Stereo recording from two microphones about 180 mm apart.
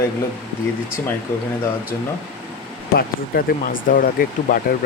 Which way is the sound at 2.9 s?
55° left (ahead or behind).